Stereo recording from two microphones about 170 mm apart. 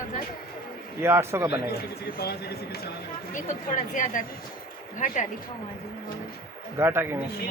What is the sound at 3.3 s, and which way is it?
A woman's voice, 50° left (ahead or behind).